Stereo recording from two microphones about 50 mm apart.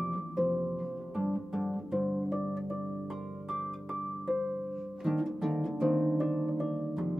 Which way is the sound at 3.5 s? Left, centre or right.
Centre.